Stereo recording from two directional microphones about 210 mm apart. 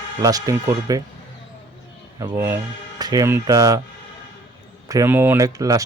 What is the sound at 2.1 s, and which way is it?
Speech, 15° right (ahead or behind).